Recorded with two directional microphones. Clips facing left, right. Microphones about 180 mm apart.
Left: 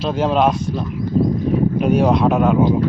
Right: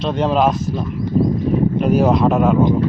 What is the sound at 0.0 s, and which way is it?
Speech, centre (ahead or behind).